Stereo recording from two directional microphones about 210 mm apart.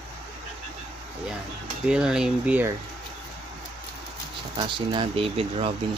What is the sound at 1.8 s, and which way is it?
Speech, 5° right (ahead or behind).